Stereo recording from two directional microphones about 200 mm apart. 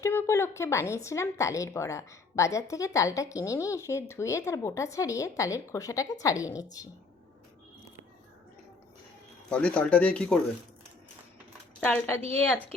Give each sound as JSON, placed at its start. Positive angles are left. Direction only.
{"t": 0.0, "sound": "speech", "side_deg": 15}
{"t": 9.5, "sound": "speech", "side_deg": 5}
{"t": 11.8, "sound": "speech", "side_deg": 10}